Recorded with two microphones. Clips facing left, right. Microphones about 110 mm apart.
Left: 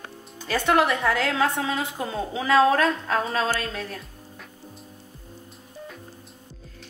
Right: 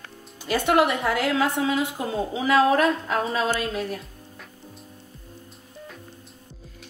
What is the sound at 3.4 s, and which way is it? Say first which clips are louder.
Speech: right 1 dB; 20° right (ahead or behind).